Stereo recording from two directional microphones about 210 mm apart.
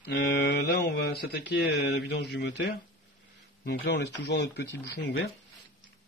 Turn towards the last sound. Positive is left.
turn(degrees=55)  # may be behind; listen again after turning